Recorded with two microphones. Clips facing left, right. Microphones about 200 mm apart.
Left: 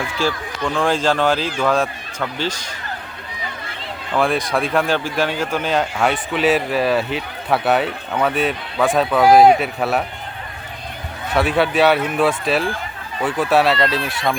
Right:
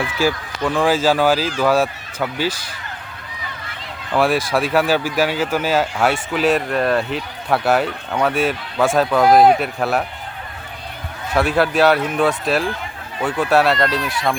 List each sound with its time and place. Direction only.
0.2 s speech: 5° right (ahead or behind)
4.2 s speech: centre (ahead or behind)
11.3 s speech: centre (ahead or behind)
14.0 s speech: 25° left (ahead or behind)